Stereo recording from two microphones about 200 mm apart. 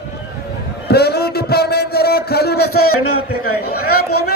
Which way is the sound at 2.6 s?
90° left.